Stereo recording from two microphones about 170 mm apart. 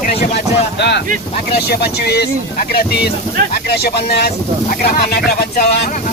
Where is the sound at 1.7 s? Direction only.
70° left (ahead or behind).